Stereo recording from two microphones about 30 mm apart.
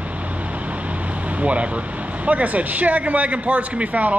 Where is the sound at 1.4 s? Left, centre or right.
Right.